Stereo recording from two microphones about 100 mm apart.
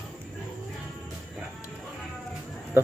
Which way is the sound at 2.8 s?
25° right (ahead or behind).